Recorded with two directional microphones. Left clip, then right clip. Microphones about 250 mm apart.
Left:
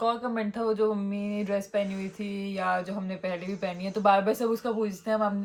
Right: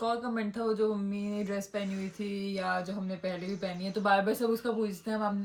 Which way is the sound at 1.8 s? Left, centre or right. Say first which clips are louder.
Left 2 dB; centre.